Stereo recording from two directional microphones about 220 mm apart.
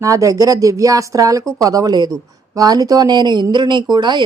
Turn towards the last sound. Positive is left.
turn(degrees=-20)  # may be behind; listen again after turning